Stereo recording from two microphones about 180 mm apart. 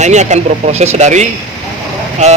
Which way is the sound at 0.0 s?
40° right (ahead or behind).